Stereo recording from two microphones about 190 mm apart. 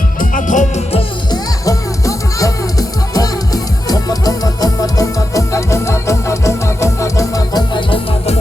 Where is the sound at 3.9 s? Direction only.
20° left (ahead or behind).